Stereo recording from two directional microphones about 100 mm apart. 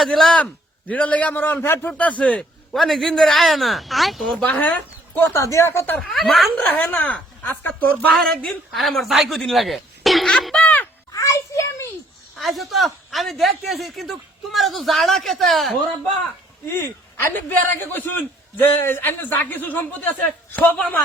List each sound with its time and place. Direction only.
0.0 s a man's voice: 5° left (ahead or behind)
2.7 s speech: centre (ahead or behind)
4.4 s a man's voice: 15° left (ahead or behind)
6.0 s speech: centre (ahead or behind)
6.7 s a man's voice: 20° left (ahead or behind)
8.7 s speech: centre (ahead or behind)
9.4 s a sound: centre (ahead or behind)
11.1 s a sound: 30° left (ahead or behind)
12.4 s speech: centre (ahead or behind)
16.7 s a man's voice: 25° left (ahead or behind)